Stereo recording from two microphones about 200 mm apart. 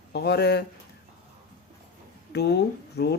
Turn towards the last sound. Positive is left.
turn(degrees=55)  # may be behind; listen again after turning